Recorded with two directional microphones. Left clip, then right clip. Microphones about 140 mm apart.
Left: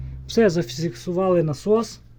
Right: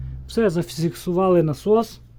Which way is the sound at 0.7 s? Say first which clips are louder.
Right 2 dB; 40° right (ahead or behind).